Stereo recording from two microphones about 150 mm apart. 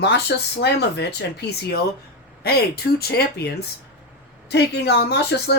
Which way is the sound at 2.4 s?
90° left.